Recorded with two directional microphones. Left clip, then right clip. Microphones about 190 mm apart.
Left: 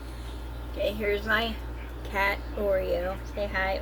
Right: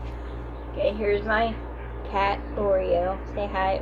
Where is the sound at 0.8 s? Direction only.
30° left (ahead or behind).